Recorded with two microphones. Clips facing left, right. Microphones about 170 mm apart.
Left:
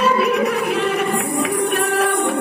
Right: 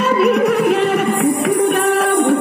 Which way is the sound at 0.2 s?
60° right (ahead or behind).